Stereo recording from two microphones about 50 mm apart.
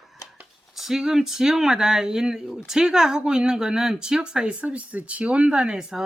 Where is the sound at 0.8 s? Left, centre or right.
Centre.